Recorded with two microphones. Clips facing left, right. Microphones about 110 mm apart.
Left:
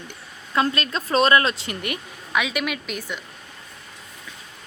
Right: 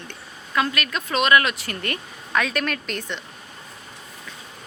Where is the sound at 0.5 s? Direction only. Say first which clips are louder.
Left 1 dB; 30° left (ahead or behind); by 3.2 s 5° left (ahead or behind).